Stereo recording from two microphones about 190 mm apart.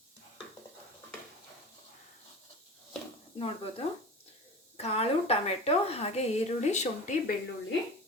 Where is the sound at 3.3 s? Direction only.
30° left (ahead or behind).